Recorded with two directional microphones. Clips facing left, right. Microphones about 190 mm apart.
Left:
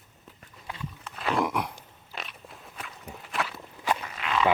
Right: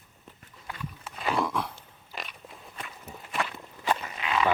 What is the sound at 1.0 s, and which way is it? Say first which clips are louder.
Wild animals: left 1 dB; centre (ahead or behind).